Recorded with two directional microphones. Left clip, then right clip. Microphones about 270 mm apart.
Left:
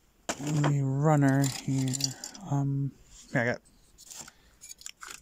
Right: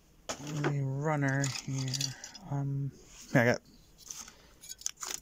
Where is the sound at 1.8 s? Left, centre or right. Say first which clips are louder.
Even; left.